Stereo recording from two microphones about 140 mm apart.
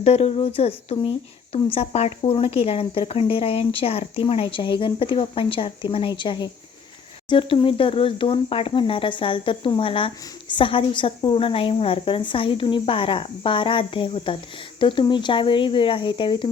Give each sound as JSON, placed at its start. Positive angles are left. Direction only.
{"t": 0.0, "sound": "speech", "side_deg": 50}